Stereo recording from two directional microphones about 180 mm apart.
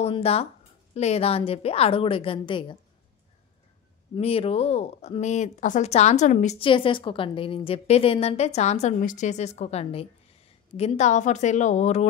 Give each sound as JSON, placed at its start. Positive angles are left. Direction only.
{"t": 0.0, "sound": "speech", "side_deg": 35}
{"t": 4.1, "sound": "speech", "side_deg": 30}